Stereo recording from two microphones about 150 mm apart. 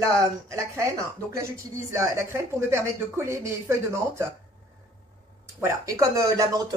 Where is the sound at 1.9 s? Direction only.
20° right (ahead or behind).